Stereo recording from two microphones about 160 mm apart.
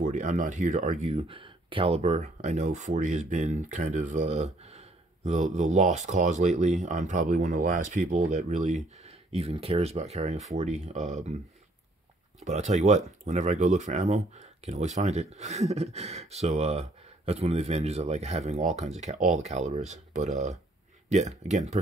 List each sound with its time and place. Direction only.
0.0 s speech: 55° right (ahead or behind)
12.4 s speech: 45° right (ahead or behind)